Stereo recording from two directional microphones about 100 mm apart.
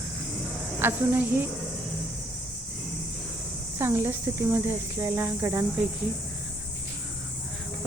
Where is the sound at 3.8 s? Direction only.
25° right (ahead or behind).